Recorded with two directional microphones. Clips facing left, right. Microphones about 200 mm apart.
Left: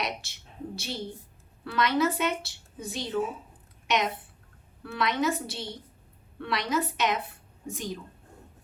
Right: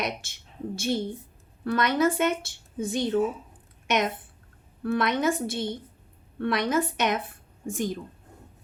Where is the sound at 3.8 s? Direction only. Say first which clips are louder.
Right 2 dB; 50° right (ahead or behind).